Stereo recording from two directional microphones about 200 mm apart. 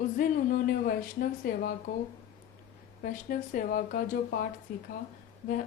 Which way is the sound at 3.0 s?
40° left (ahead or behind).